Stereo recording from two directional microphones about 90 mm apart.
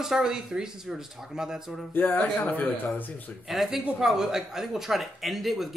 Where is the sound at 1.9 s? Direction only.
20° left (ahead or behind).